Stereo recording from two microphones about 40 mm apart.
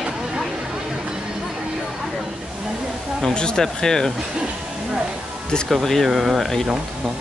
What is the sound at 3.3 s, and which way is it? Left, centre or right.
Speech, left.